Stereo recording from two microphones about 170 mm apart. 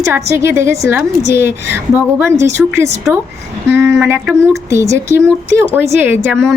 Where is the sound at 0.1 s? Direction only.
15° right (ahead or behind).